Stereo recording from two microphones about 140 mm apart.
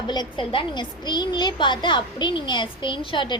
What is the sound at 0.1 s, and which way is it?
A woman's voice, 35° left (ahead or behind).